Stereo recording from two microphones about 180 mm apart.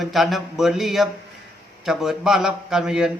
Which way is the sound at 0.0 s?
Centre (ahead or behind).